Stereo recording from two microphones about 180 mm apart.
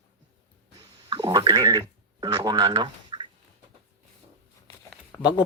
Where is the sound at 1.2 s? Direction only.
20° right (ahead or behind).